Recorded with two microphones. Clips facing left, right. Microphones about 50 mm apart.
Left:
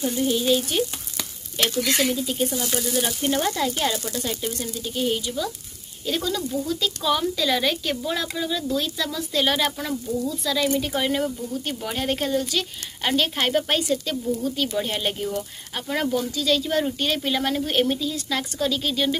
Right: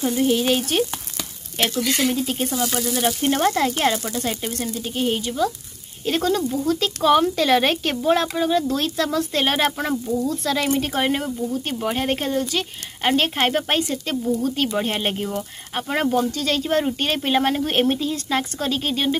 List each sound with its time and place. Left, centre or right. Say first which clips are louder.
0.0 s speech: right 3 dB; right
6.0 s speech: right 5 dB; right
6.6 s speech: right 5 dB; right
11.1 s speech: right 2 dB; right
14.4 s speech: right 3 dB; right
16.3 s speech: right 1 dB; right